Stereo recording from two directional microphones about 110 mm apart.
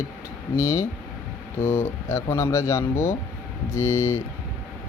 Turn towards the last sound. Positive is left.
turn(degrees=25)  # may be behind; listen again after turning